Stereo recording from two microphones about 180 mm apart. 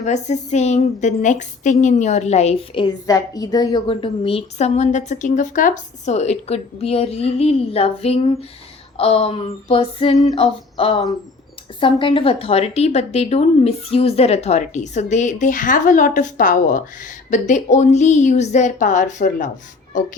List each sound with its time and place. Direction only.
0.0 s a woman's voice: 40° left (ahead or behind)